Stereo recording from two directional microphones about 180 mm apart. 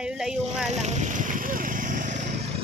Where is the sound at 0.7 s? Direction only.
40° right (ahead or behind).